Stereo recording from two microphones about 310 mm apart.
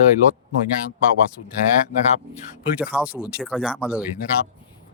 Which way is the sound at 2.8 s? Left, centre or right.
Centre.